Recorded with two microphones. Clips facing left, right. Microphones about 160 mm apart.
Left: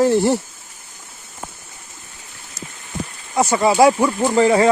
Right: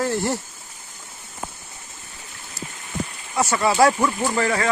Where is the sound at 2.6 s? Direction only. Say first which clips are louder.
Even; 20° left (ahead or behind).